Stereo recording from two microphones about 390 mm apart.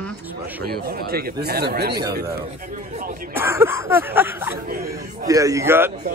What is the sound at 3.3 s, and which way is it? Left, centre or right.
Speech, centre.